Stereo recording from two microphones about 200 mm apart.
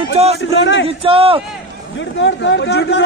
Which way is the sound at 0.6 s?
65° left (ahead or behind).